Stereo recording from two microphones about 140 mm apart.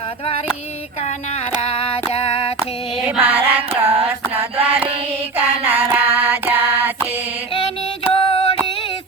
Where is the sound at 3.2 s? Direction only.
10° right (ahead or behind).